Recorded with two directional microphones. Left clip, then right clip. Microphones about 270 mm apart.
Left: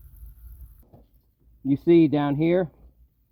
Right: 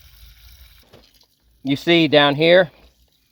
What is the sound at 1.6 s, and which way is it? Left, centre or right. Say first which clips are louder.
Speech: right 2 dB; right.